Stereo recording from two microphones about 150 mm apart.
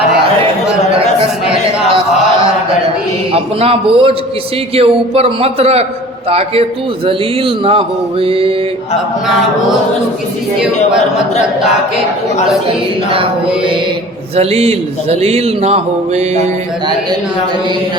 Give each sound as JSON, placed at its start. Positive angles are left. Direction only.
{"t": 3.3, "sound": "a man's voice", "side_deg": -40}
{"t": 12.6, "sound": "a man's voice", "side_deg": -35}
{"t": 14.3, "sound": "a sound", "side_deg": -45}